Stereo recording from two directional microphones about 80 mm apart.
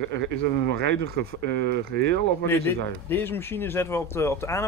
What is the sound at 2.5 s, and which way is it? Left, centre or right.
Speech, left.